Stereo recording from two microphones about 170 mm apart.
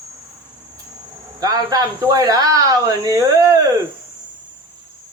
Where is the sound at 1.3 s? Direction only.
20° right (ahead or behind).